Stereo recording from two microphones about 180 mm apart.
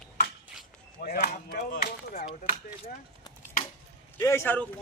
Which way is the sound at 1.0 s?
50° left (ahead or behind).